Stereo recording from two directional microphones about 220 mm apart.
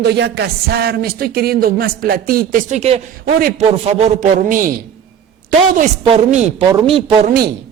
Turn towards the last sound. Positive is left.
turn(degrees=-40)  # may be behind; listen again after turning